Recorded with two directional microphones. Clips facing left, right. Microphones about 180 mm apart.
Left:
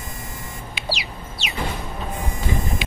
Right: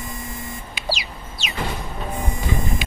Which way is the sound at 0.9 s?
45° right (ahead or behind).